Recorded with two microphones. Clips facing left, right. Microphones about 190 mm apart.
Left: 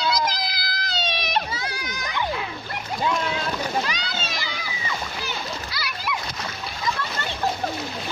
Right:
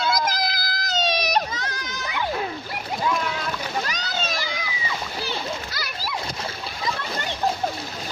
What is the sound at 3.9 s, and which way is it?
Splash, 45° right (ahead or behind).